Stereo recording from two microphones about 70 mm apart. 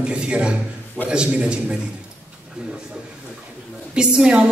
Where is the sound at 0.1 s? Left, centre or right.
Centre.